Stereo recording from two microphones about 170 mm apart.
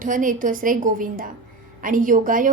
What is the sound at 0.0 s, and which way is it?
A woman's voice, 50° right (ahead or behind).